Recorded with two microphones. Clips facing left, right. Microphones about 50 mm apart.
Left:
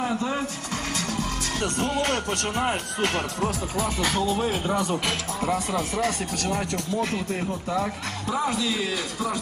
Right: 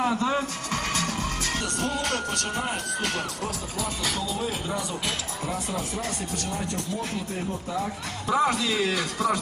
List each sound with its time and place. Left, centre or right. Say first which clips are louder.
0.7 s music: right 3 dB; right
1.6 s speech: left 7 dB; left
8.4 s a man's voice: right 2 dB; centre